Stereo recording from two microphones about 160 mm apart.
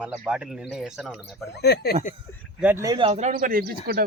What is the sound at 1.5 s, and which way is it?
Speech, 90° left.